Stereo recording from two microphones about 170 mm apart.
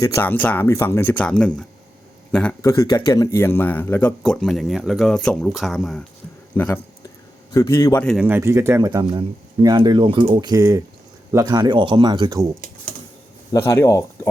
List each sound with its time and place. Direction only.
0.0 s a man's voice: 15° left (ahead or behind)
8.2 s speech: 15° right (ahead or behind)
13.5 s speech: 15° left (ahead or behind)